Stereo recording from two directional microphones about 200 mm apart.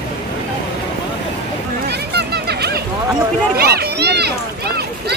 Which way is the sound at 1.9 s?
55° right (ahead or behind).